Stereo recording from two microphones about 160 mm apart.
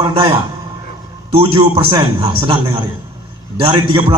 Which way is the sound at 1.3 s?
35° right (ahead or behind).